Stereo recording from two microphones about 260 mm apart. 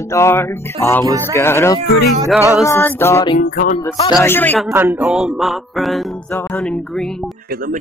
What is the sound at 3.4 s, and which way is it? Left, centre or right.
Music, left.